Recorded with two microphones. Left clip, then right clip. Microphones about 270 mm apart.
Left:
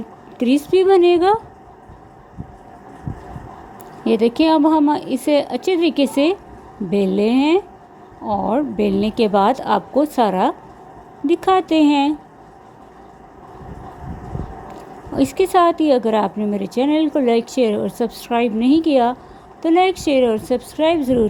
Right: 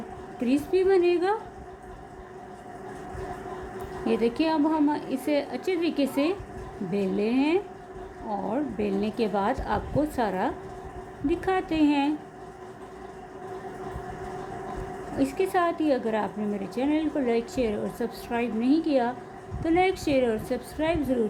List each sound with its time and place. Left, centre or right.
0.3 s a woman's voice: left
4.0 s a woman's voice: left
15.1 s a woman's voice: left